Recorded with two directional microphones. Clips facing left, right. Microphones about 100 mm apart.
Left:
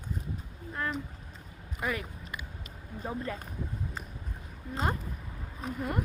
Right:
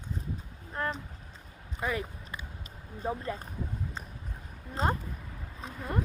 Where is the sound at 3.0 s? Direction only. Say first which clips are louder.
Right 2 dB; 25° right (ahead or behind).